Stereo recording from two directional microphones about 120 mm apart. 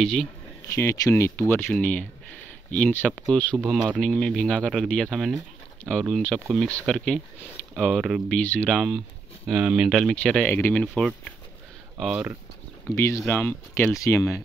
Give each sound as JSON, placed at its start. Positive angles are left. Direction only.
{"t": 0.0, "sound": "speech", "side_deg": 5}
{"t": 0.7, "sound": "speech", "side_deg": 25}
{"t": 3.5, "sound": "speech", "side_deg": -5}
{"t": 4.0, "sound": "speech", "side_deg": 5}
{"t": 7.9, "sound": "speech", "side_deg": -5}
{"t": 8.3, "sound": "speech", "side_deg": 10}
{"t": 10.1, "sound": "speech", "side_deg": 10}
{"t": 12.0, "sound": "speech", "side_deg": -10}
{"t": 12.9, "sound": "speech", "side_deg": 20}
{"t": 13.9, "sound": "speech", "side_deg": 25}